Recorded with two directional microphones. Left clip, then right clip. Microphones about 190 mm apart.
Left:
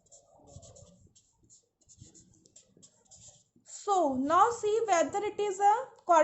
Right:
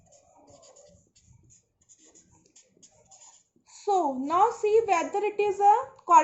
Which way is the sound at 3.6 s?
60° left (ahead or behind).